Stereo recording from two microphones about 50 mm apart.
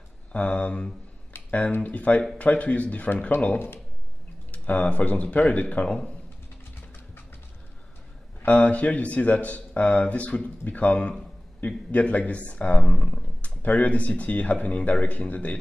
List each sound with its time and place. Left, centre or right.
0.3 s speech: left
1.3 s a sound: left
1.7 s speech: left
3.5 s speech: left
4.5 s speech: left
8.5 s speech: left